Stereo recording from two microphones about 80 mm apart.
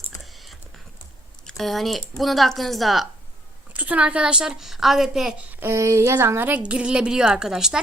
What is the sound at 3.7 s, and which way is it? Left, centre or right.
A woman's voice, centre.